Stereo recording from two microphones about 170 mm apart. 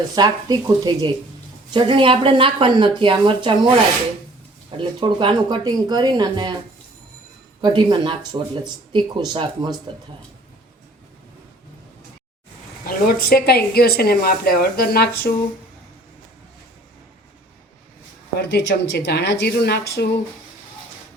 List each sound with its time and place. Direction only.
0.2 s speech: 25° right (ahead or behind)
4.8 s speech: 30° right (ahead or behind)
7.6 s speech: 25° right (ahead or behind)
12.8 s speech: 55° left (ahead or behind)
18.3 s speech: 70° left (ahead or behind)